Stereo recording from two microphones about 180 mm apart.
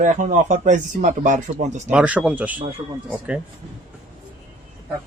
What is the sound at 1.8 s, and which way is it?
Speech, 10° right (ahead or behind).